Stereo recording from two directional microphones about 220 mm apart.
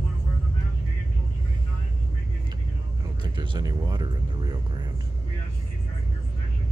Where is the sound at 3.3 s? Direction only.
20° right (ahead or behind).